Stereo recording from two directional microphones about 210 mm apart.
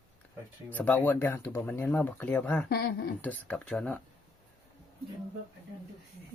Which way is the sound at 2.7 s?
50° left (ahead or behind).